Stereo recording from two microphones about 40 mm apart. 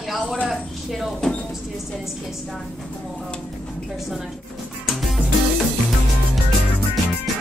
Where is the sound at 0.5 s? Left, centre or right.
Centre.